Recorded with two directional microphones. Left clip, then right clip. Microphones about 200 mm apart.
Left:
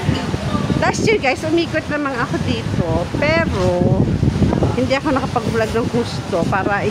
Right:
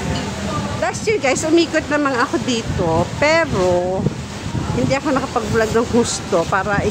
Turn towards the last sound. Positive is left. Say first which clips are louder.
# even
turn(degrees=0)  # may be behind; listen again after turning